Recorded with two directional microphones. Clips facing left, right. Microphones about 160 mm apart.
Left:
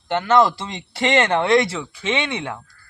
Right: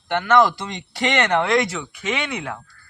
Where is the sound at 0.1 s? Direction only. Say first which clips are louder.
Even; 25° left (ahead or behind).